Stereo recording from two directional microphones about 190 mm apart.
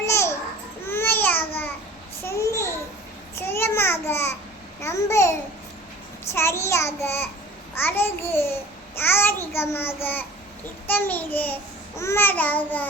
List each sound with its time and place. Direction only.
0.0 s babbling: 15° left (ahead or behind)
6.3 s a child's voice: 15° left (ahead or behind)